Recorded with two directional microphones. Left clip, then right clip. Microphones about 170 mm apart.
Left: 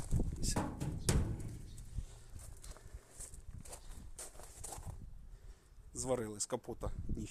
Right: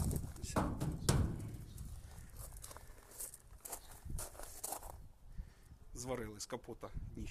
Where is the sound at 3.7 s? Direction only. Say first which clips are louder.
Right 4 dB; 55° right (ahead or behind).